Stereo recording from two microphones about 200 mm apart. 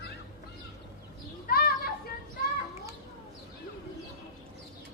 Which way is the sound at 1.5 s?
50° left (ahead or behind).